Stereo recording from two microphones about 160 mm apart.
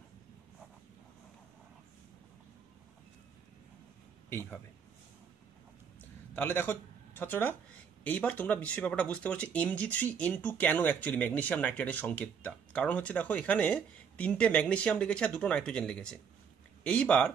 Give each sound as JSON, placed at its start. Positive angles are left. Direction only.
{"t": 4.3, "sound": "a man's voice", "side_deg": 15}
{"t": 6.3, "sound": "speech", "side_deg": 10}